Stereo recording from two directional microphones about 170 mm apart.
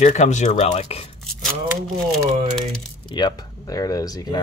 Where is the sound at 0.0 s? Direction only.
45° left (ahead or behind).